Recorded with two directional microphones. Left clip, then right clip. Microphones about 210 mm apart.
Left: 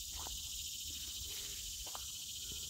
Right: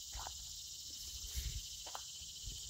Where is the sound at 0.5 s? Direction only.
55° left (ahead or behind).